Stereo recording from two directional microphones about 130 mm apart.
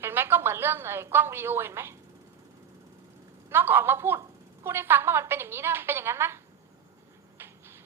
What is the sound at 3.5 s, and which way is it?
A woman's voice, 15° right (ahead or behind).